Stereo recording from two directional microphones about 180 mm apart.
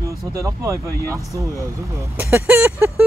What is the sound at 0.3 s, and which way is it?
Speech, 15° right (ahead or behind).